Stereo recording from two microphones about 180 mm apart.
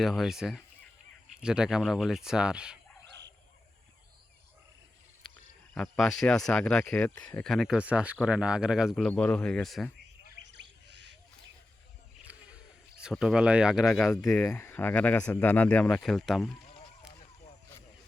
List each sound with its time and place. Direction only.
0.0 s speech: centre (ahead or behind)
5.7 s speech: 5° left (ahead or behind)
10.2 s owl: 75° right (ahead or behind)
13.0 s speech: 5° right (ahead or behind)
14.3 s speech: 15° left (ahead or behind)